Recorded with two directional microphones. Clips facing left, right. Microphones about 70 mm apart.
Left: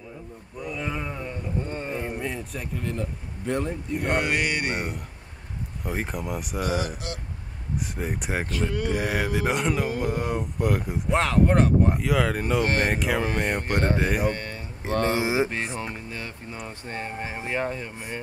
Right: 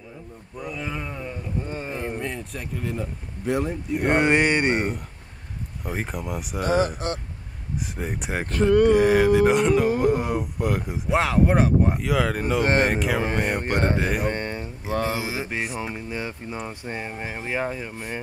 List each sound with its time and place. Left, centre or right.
0.6 s speech: centre
4.0 s speech: right
5.9 s speech: centre
7.0 s speech: right
7.9 s speech: centre
8.5 s speech: right
8.9 s speech: centre
13.7 s speech: right
13.9 s speech: centre
14.3 s a sound: right
14.9 s speech: centre
15.1 s mantra: left
15.5 s speech: centre
17.9 s speech: right